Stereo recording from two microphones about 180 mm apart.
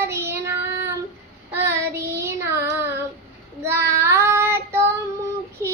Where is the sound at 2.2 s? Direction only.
15° right (ahead or behind).